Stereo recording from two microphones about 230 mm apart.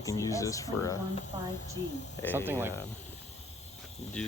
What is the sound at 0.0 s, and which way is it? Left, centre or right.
Speech, centre.